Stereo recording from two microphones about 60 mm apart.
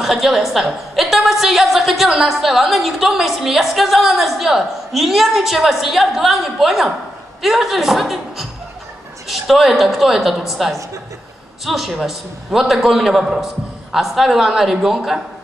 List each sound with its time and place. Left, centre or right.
0.0 s a woman's voice: centre